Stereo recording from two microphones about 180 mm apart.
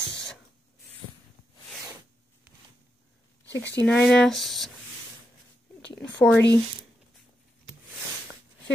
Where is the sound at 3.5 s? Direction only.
80° left.